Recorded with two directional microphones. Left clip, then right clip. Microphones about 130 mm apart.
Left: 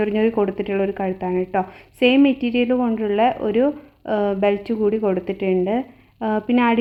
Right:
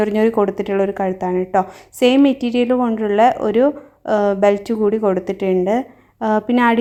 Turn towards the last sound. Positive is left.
turn(degrees=-30)  # may be behind; listen again after turning